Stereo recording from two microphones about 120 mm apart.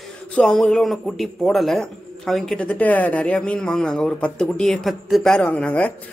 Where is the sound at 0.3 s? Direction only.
5° left (ahead or behind).